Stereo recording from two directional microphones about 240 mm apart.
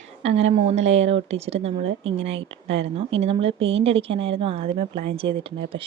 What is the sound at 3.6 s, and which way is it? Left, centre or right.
Speech, right.